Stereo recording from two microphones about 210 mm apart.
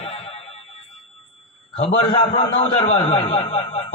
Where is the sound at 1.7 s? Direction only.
25° left (ahead or behind).